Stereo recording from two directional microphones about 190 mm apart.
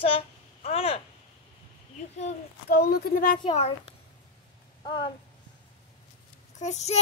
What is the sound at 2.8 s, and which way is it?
Speech, 55° left (ahead or behind).